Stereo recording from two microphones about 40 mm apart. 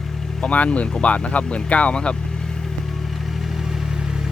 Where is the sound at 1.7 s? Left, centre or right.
Left.